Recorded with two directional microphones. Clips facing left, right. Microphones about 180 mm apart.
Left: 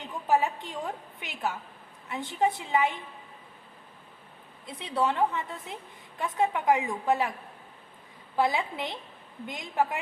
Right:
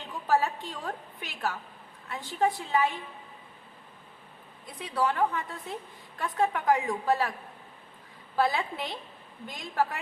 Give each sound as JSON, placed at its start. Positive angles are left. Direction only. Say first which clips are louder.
{"t": 0.3, "sound": "a woman's voice", "louder": "left 1 dB", "side_deg": 20}
{"t": 4.6, "sound": "a woman's voice", "louder": "left 1 dB", "side_deg": 25}
{"t": 8.4, "sound": "a woman's voice", "louder": "left 1 dB", "side_deg": 20}